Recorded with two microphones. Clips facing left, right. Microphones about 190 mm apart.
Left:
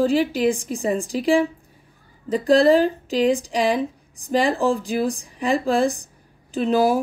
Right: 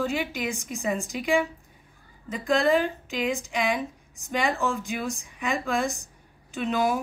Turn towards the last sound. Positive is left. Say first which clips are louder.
# left 7 dB
turn(degrees=35)  # may be behind; listen again after turning